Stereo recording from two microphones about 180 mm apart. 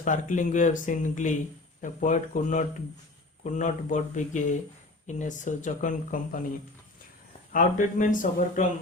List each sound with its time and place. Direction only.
0.0 s speech: 45° left (ahead or behind)
7.5 s speech: 45° left (ahead or behind)